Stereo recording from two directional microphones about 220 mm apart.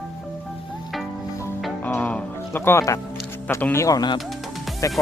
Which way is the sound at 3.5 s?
10° left (ahead or behind).